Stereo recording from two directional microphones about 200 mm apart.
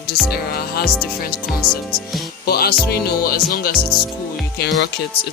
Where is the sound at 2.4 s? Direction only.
50° left (ahead or behind).